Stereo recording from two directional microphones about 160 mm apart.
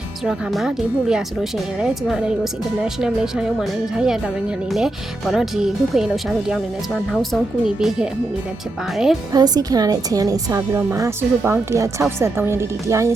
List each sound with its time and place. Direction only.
0.3 s speech: 5° right (ahead or behind)
9.3 s a woman's voice: 25° right (ahead or behind)